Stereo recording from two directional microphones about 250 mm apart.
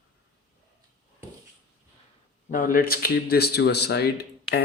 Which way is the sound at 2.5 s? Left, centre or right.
Left.